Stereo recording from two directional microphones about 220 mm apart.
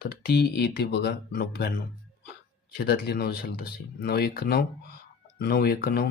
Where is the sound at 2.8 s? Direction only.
45° left (ahead or behind).